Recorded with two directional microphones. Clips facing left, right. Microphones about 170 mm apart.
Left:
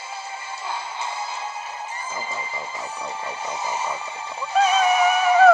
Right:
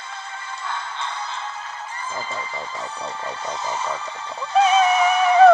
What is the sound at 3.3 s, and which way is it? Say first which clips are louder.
Speech: right 1 dB; 10° left (ahead or behind).